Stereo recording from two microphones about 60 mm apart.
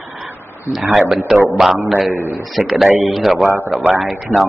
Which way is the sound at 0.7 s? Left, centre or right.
Centre.